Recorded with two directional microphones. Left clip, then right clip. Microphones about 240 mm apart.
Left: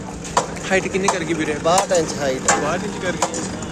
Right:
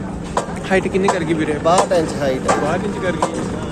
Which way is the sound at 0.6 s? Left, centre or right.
Centre.